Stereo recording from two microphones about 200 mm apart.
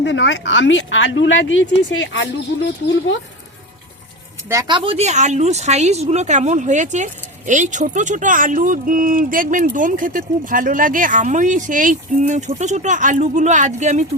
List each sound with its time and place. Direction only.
0.0 s speech: 65° left (ahead or behind)
4.4 s speech: 20° right (ahead or behind); by 14.0 s 35° right (ahead or behind)